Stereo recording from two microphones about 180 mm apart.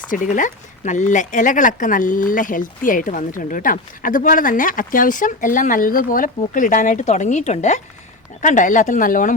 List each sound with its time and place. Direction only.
0.1 s speech: 45° left (ahead or behind)